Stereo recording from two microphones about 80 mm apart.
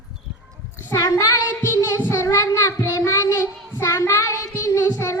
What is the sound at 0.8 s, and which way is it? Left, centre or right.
Child singing, left.